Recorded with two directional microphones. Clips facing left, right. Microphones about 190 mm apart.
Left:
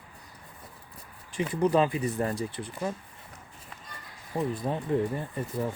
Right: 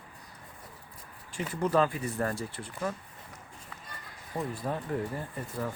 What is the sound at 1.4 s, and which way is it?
Speech, 15° left (ahead or behind).